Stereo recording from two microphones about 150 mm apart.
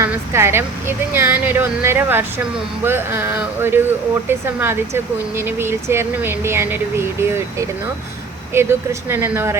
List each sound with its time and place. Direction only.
0.0 s speech: 15° right (ahead or behind)
8.5 s speech: 15° right (ahead or behind)